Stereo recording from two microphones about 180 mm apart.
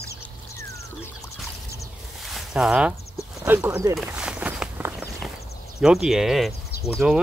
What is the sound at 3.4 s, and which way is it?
Speech, 10° right (ahead or behind).